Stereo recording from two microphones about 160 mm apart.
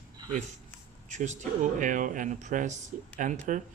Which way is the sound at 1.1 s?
45° right (ahead or behind).